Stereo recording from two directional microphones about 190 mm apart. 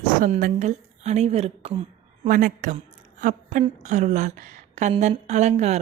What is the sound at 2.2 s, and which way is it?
Speech, 45° right (ahead or behind).